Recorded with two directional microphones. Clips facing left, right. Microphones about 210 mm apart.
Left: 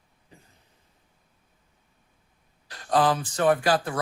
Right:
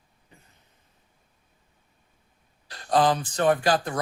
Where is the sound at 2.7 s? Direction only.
35° right (ahead or behind).